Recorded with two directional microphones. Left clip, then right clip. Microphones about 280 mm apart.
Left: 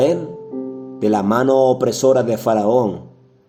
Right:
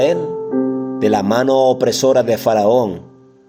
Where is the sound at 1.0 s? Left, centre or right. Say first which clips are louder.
Right 1 dB; right.